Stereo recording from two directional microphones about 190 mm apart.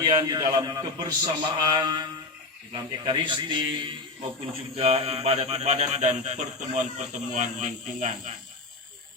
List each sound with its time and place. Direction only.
0.0 s a man's voice: 20° right (ahead or behind); by 8.4 s 40° right (ahead or behind)